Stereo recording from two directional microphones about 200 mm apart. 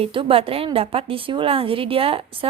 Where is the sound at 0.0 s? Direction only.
25° right (ahead or behind).